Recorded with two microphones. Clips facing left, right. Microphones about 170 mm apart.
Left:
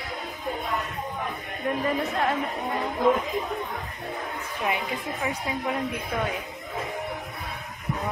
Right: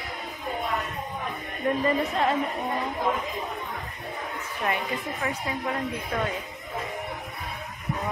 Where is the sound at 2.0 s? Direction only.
Centre (ahead or behind).